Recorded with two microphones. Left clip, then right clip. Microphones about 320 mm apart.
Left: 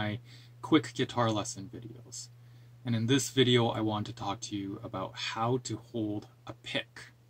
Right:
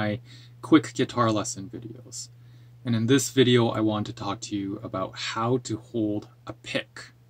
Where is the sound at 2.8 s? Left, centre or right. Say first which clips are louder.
Right 7 dB; centre.